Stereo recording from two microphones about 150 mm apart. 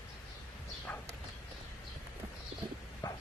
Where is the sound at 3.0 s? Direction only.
25° left (ahead or behind).